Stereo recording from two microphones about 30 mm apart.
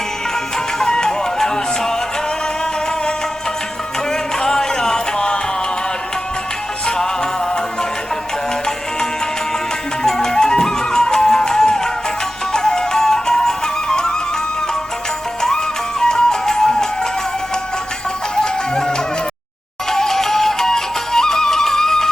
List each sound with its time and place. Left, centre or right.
0.9 s music: left
4.1 s music: centre
6.8 s music: left
10.0 s music: left
16.0 s music: left
18.4 s music: left